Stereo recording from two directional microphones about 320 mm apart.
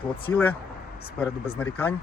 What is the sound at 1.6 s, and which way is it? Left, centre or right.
Speech, centre.